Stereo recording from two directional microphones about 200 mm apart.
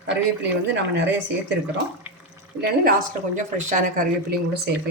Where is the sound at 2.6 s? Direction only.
40° right (ahead or behind).